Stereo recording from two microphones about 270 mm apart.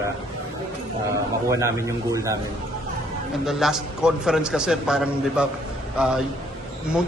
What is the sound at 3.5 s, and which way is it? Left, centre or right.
A man's voice, centre.